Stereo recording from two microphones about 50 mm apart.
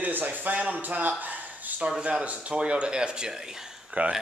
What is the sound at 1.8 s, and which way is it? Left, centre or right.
Speech, centre.